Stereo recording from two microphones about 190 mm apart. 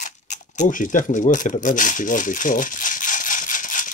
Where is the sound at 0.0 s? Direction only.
40° left (ahead or behind).